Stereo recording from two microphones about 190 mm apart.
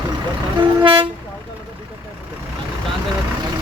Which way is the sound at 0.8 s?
25° right (ahead or behind).